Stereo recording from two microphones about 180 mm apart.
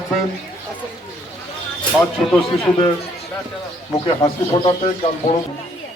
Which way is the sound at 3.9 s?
25° left (ahead or behind).